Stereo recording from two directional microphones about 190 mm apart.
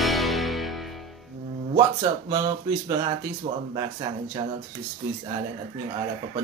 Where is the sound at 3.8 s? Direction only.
25° right (ahead or behind).